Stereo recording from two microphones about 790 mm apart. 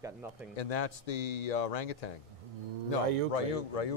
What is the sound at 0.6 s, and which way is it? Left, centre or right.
Speech, left.